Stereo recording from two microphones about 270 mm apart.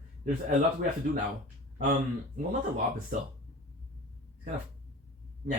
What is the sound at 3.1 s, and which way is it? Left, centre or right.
Speech, right.